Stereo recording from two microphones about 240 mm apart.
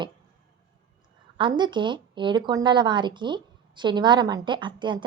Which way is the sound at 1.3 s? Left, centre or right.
Centre.